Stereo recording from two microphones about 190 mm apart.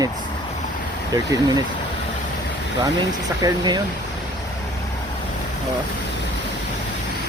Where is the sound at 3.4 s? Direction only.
20° right (ahead or behind).